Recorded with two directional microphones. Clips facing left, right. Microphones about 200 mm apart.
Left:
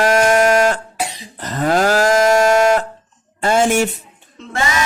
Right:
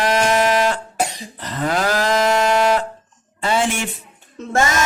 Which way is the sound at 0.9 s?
45° right (ahead or behind).